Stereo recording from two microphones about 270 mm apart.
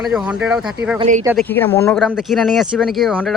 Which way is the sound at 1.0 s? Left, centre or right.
Right.